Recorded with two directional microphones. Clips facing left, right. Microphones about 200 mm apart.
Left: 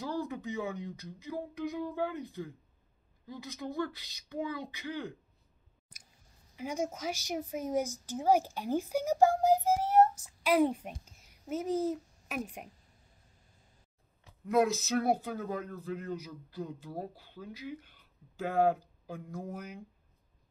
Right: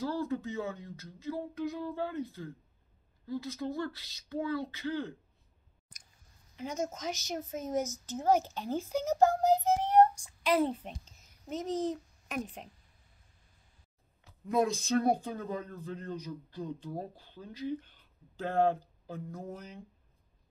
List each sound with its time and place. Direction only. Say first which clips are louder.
0.0 s speech: right 2 dB; 15° left (ahead or behind)
6.5 s a child's voice: left 1 dB; 10° left (ahead or behind)
14.4 s speech: left 2 dB; 5° left (ahead or behind)